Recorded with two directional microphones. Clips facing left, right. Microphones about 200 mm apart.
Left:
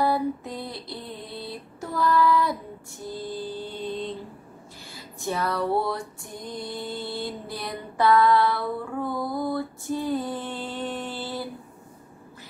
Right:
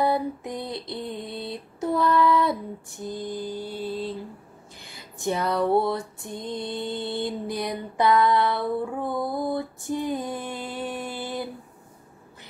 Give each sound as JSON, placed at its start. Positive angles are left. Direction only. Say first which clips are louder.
{"t": 0.0, "sound": "female singing", "louder": "even", "side_deg": -20}
{"t": 4.8, "sound": "a sound", "louder": "right 3 dB", "side_deg": -20}
{"t": 5.7, "sound": "mantra", "louder": "right 3 dB", "side_deg": -25}